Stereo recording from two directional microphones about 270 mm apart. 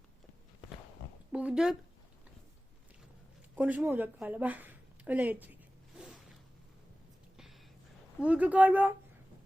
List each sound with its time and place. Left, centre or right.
1.3 s speech: centre
3.5 s a woman's voice: centre
8.2 s speech: centre